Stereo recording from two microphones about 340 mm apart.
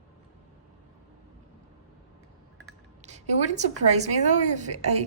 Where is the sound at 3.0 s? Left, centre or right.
Centre.